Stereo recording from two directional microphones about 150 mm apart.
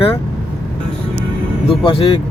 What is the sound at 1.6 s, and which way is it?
Speech, 35° left (ahead or behind).